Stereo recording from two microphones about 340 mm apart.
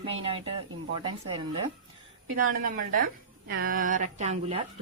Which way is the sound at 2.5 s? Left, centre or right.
Right.